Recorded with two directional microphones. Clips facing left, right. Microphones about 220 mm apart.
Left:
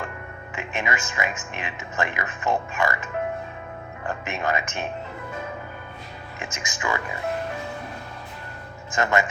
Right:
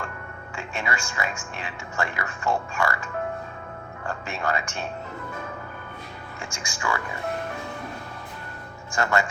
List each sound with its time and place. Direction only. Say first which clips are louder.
0.5 s speech: left 2 dB; 20° left (ahead or behind)
6.4 s speech: left 1 dB; 20° left (ahead or behind)
8.9 s speech: left 2 dB; 20° left (ahead or behind)